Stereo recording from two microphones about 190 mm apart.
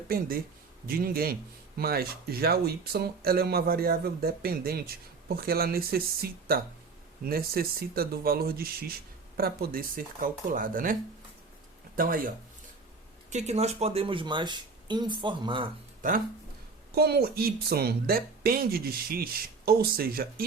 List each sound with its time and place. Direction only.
0.9 s speech: 50° right (ahead or behind)
11.9 s speech: 50° right (ahead or behind)
13.3 s speech: 35° right (ahead or behind)
16.0 s speech: 45° right (ahead or behind)
16.9 s speech: 55° right (ahead or behind)